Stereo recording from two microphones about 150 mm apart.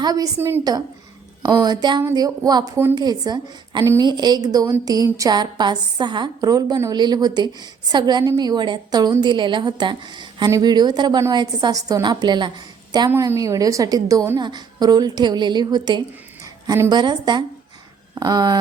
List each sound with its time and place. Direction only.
0.0 s a woman's voice: 25° right (ahead or behind)
13.1 s a woman's voice: 20° right (ahead or behind)
16.6 s a woman's voice: 20° right (ahead or behind)
16.9 s a woman's voice: 30° right (ahead or behind)